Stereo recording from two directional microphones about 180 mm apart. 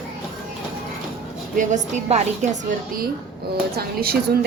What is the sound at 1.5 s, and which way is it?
Speech, 45° right (ahead or behind).